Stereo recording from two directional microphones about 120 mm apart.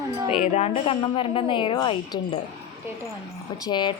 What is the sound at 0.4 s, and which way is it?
Speech, 65° left (ahead or behind).